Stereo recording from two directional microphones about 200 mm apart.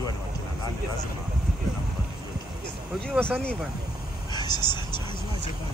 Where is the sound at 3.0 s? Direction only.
5° left (ahead or behind).